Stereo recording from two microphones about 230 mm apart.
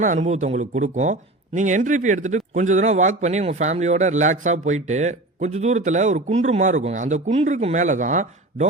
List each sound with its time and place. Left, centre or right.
0.0 s speech: right